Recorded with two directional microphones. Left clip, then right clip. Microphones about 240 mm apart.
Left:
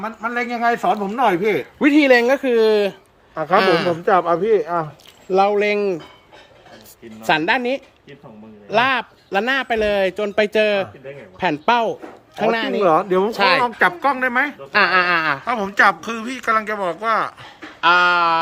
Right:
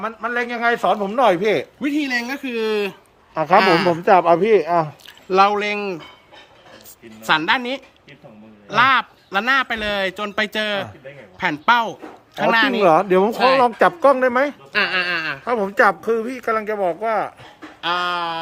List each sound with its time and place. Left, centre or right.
0.9 s speech: right
1.8 s speech: centre
3.3 s a woman's voice: right
3.6 s speech: centre
4.0 s a woman's voice: right
5.3 s speech: centre
7.3 s speech: centre
12.8 s a woman's voice: right
14.7 s speech: centre
15.4 s speech: right
17.7 s a sound: centre